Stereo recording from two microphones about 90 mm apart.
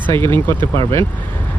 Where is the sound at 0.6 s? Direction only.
90° right.